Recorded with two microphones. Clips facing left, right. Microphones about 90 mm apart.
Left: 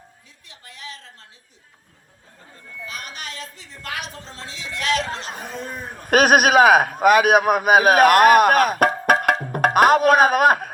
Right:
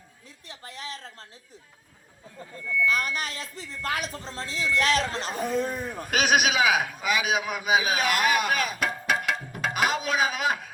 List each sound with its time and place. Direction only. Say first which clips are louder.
0.4 s a woman's voice: right 1 dB; 35° right (ahead or behind)
2.8 s a woman's voice: right 6 dB; 40° right (ahead or behind)
5.3 s a man's voice: right 4 dB; 40° left (ahead or behind)